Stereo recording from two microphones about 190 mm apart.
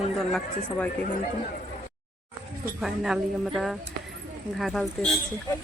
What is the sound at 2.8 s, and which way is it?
Speech, centre (ahead or behind).